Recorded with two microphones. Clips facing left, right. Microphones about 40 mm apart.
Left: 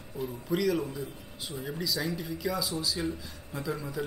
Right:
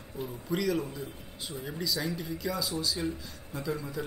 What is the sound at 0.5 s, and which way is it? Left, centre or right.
Speech, centre.